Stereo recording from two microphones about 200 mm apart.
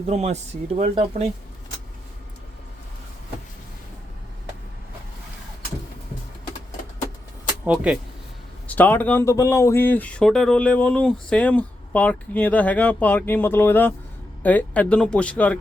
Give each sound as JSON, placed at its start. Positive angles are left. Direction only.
{"t": 0.1, "sound": "speech", "side_deg": -35}
{"t": 7.6, "sound": "speech", "side_deg": -5}
{"t": 8.6, "sound": "speech", "side_deg": 10}